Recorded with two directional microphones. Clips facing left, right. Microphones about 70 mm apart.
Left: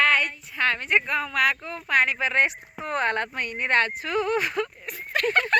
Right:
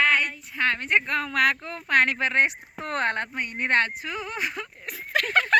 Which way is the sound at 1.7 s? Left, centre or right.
Right.